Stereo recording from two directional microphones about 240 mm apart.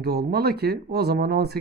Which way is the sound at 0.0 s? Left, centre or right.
Right.